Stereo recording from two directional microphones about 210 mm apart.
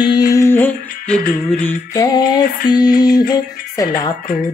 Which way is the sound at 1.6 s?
15° left (ahead or behind).